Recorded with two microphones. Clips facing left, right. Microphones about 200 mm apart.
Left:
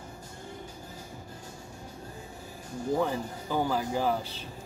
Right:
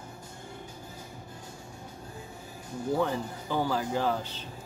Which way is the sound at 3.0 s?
10° left (ahead or behind).